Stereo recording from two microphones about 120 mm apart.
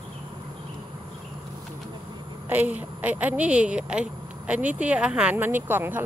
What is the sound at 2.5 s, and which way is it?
Speech, 15° right (ahead or behind).